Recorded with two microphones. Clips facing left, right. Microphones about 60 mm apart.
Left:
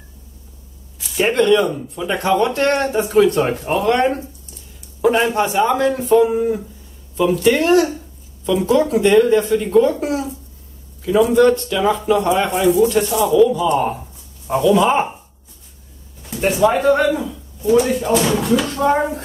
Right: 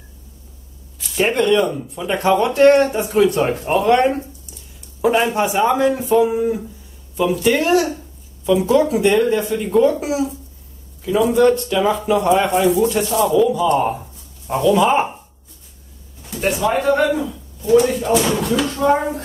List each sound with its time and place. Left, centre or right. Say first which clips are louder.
0.9 s speech: left 1 dB; centre
16.3 s speech: left 3 dB; centre